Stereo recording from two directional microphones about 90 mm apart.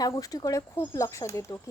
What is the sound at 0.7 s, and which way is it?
Speech, 30° left (ahead or behind).